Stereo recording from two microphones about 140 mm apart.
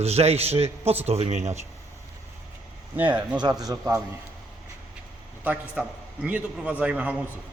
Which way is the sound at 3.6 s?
25° right (ahead or behind).